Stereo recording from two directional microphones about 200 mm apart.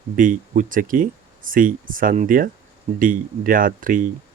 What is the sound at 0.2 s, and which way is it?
Speech, 40° right (ahead or behind).